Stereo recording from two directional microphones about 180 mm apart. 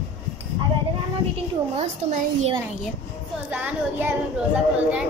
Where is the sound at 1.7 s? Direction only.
35° right (ahead or behind).